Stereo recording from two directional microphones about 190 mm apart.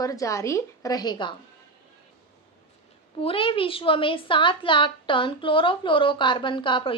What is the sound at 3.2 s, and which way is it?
A woman's voice, 30° left (ahead or behind).